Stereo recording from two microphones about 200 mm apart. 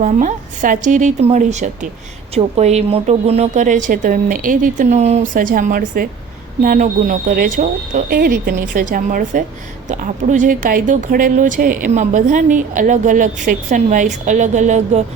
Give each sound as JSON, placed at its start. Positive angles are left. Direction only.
{"t": 0.0, "sound": "speech", "side_deg": -40}